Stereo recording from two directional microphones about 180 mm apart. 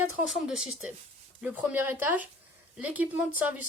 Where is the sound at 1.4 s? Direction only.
10° right (ahead or behind).